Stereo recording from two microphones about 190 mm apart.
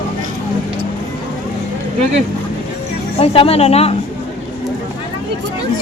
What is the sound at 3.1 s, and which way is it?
Speech, 30° left (ahead or behind).